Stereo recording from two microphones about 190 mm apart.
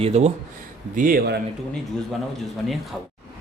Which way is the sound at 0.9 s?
45° right (ahead or behind).